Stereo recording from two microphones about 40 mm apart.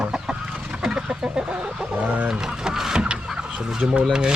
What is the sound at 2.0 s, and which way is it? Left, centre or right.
Speech, right.